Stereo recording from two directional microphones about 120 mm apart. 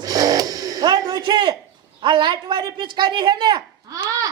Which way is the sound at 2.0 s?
40° right (ahead or behind).